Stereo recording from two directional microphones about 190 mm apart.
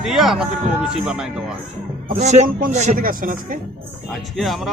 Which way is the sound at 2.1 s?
35° right (ahead or behind).